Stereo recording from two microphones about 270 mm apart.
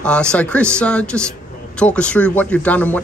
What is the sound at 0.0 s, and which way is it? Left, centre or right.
Speech, centre.